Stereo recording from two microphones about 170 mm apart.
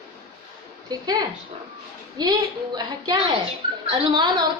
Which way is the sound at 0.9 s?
25° right (ahead or behind).